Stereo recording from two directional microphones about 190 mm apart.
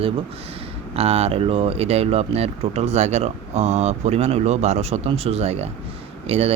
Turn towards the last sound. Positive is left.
turn(degrees=-30)  # may be behind; listen again after turning